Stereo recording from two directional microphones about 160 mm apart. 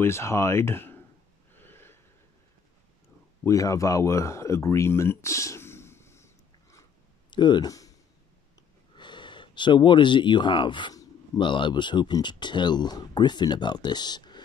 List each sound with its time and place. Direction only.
0.0 s speech: 15° left (ahead or behind)
1.6 s snort: 15° left (ahead or behind)
3.4 s a sound: 20° left (ahead or behind)
8.9 s speech: 30° left (ahead or behind)